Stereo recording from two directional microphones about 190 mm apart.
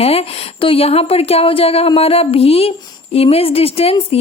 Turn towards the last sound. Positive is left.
turn(degrees=30)  # may be behind; listen again after turning